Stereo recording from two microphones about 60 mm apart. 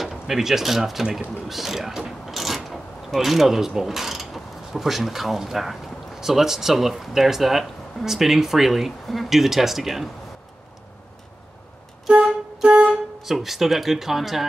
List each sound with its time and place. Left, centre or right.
0.0 s speech: centre
1.5 s mechanisms: centre
12.1 s music: centre
12.9 s speech: centre